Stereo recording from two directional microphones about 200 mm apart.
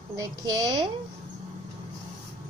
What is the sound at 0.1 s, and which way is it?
Speech, 20° right (ahead or behind).